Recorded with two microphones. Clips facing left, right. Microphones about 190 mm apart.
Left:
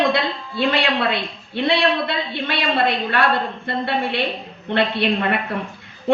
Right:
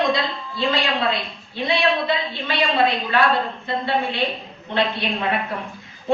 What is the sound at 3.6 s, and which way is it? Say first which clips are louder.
A woman's voice: left 1 dB; 65° left (ahead or behind).